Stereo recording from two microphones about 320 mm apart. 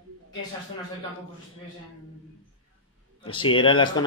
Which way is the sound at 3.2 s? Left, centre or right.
Centre.